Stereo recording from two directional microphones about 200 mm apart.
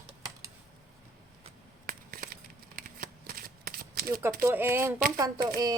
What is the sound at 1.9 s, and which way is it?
Shuffling cards, 45° right (ahead or behind).